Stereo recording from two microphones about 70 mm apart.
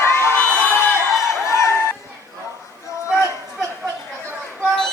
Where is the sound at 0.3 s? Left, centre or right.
Left.